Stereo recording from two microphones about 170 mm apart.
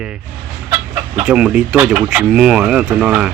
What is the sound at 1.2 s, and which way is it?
Speech, 5° right (ahead or behind).